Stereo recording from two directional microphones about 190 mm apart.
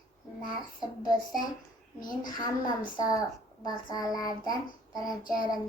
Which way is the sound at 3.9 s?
20° left (ahead or behind).